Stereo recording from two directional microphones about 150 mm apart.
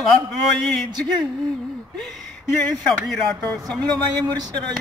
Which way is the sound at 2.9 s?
Centre (ahead or behind).